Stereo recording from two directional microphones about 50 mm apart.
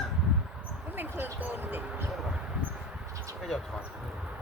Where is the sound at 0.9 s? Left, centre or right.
Right.